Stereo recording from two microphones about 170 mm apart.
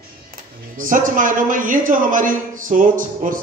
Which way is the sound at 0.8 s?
50° right (ahead or behind).